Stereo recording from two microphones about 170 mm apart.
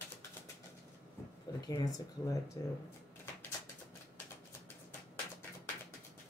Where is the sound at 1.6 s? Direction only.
20° left (ahead or behind).